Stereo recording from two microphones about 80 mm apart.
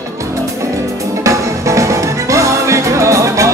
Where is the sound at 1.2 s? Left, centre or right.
Right.